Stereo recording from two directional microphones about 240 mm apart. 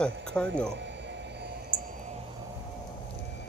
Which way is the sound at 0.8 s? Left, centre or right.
Right.